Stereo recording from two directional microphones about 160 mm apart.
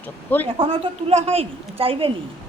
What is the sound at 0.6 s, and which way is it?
A woman's voice, 35° right (ahead or behind).